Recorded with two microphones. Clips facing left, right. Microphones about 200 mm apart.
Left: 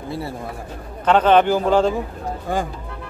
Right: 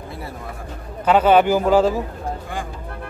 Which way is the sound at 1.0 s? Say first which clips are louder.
Even; 10° right (ahead or behind).